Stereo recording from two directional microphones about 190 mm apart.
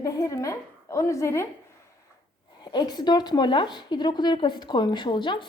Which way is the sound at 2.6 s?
25° left (ahead or behind).